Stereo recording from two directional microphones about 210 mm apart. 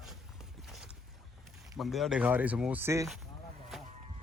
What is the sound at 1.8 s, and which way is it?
Speech, centre (ahead or behind).